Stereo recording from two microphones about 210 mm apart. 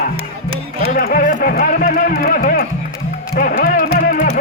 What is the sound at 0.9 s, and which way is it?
Music, 45° left (ahead or behind).